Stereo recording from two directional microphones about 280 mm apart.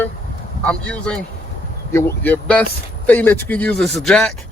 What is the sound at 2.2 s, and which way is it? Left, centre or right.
Speech, centre.